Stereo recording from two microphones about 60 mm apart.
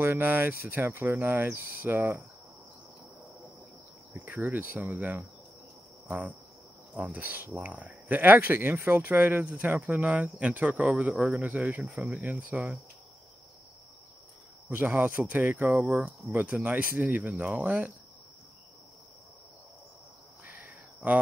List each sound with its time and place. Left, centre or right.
0.0 s speech: right
4.1 s speech: right
6.0 s cricket: right
7.0 s speech: right; by 12.7 s centre
15.0 s speech: right
15.7 s speech: centre
20.4 s a sound: right